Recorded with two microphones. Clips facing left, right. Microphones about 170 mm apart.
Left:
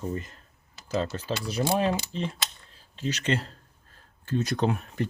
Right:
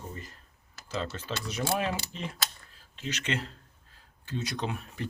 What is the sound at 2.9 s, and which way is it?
Speech, 35° left (ahead or behind).